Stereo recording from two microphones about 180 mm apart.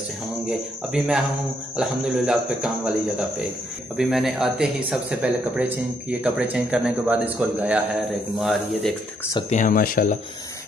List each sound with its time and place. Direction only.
0.5 s speech: 5° right (ahead or behind)
9.5 s speech: 45° left (ahead or behind)